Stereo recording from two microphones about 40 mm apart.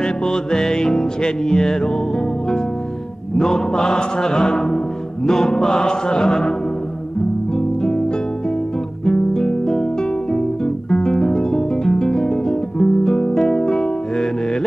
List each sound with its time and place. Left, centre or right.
0.3 s music: centre
3.3 s music: centre
7.5 s guitar: centre
9.0 s guitar: centre